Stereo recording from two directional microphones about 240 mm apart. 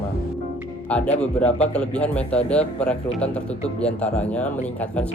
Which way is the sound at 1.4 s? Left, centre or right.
Left.